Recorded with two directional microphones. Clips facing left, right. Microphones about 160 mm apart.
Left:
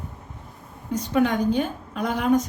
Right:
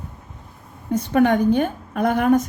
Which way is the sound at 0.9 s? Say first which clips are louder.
Right 5 dB; 55° right (ahead or behind).